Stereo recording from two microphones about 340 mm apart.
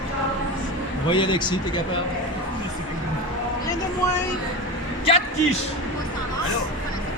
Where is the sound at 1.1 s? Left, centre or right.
Centre.